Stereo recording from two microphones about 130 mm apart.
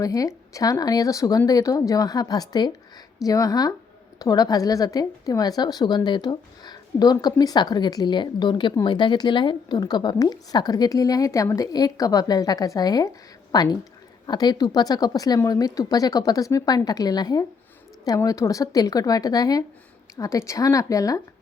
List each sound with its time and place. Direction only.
0.0 s a woman's voice: 25° left (ahead or behind)